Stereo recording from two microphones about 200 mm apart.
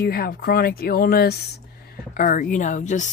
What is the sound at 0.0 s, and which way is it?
Speech, 50° left (ahead or behind).